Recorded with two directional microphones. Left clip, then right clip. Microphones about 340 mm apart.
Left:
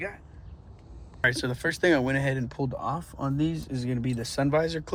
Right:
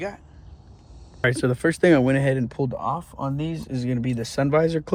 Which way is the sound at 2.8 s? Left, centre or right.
Right.